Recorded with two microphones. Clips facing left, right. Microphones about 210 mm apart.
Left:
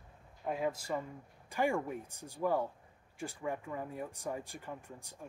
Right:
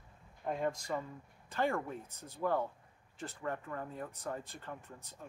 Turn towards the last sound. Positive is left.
turn(degrees=10)  # may be behind; listen again after turning